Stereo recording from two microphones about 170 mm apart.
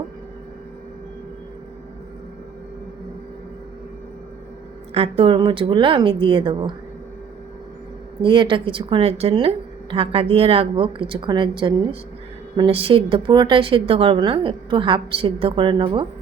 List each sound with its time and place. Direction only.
4.9 s a woman's voice: 35° right (ahead or behind)
8.2 s a woman's voice: 30° right (ahead or behind)